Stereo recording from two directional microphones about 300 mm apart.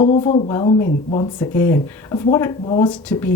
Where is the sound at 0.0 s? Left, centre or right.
Centre.